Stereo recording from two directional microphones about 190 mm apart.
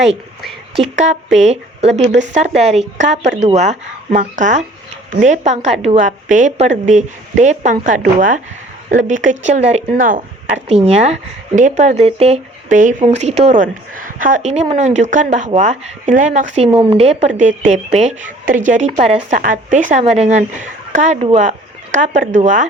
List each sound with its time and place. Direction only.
0.8 s speech: 40° right (ahead or behind)
9.9 s speech: 45° right (ahead or behind)
10.5 s speech: 30° right (ahead or behind)
16.7 s speech: 30° right (ahead or behind)